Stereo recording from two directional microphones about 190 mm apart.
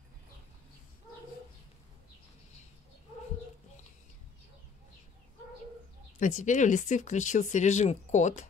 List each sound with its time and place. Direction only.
6.1 s speech: 40° left (ahead or behind)